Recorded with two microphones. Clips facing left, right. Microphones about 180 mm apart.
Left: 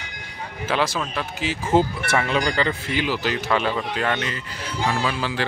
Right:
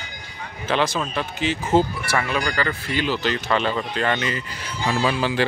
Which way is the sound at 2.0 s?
25° left (ahead or behind).